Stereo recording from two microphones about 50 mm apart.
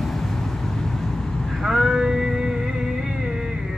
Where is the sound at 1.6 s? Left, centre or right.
Centre.